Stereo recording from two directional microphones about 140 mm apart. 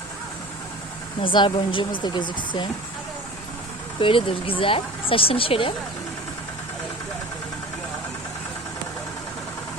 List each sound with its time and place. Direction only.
1.2 s speech: 35° left (ahead or behind)
4.0 s speech: 40° left (ahead or behind)